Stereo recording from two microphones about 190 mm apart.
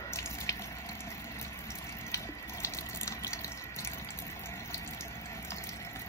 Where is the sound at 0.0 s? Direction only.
15° left (ahead or behind).